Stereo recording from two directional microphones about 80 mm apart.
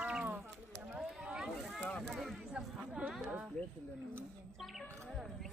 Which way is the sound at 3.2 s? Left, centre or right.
Right.